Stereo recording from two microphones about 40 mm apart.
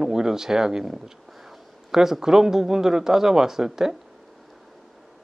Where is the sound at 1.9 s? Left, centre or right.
Centre.